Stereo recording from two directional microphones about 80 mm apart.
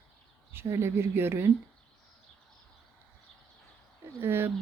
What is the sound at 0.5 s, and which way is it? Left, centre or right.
Speech, right.